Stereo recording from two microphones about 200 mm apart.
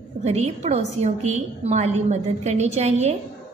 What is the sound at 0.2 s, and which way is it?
A woman's voice, 35° right (ahead or behind).